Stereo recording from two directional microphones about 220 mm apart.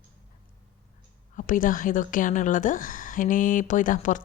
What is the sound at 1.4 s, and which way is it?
A woman's voice, 40° left (ahead or behind).